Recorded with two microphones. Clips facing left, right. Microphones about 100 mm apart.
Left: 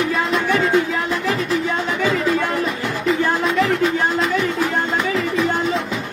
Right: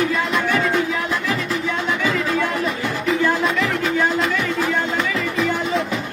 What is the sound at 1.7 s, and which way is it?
Music, 35° left (ahead or behind).